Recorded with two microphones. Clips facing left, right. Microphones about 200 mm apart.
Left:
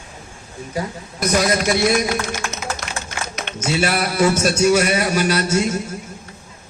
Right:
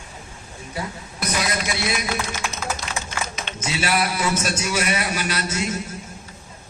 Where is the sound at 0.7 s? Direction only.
45° left (ahead or behind).